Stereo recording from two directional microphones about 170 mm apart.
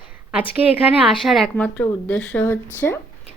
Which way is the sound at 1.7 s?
10° left (ahead or behind).